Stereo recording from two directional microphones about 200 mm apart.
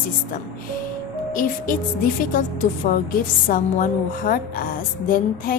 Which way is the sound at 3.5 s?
45° left (ahead or behind).